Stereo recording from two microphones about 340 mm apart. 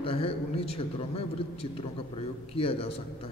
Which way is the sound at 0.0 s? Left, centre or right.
Centre.